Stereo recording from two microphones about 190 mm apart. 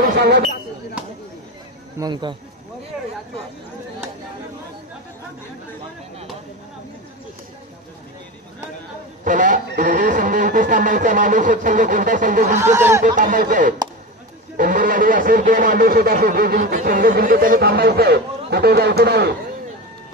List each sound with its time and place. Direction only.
0.0 s speech: 55° right (ahead or behind)
1.0 s chop: 5° right (ahead or behind)
2.0 s speech: 20° right (ahead or behind)
9.2 s a sound: 45° right (ahead or behind)
12.6 s speech: 15° right (ahead or behind)
13.0 s a sound: 45° right (ahead or behind)
17.1 s a man's voice: 50° right (ahead or behind)